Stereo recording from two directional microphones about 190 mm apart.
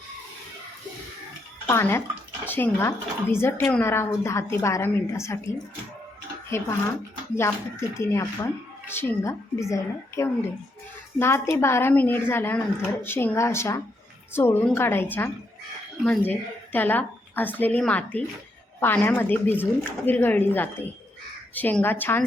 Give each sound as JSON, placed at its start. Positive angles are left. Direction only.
{"t": 1.6, "sound": "a woman's voice", "side_deg": 15}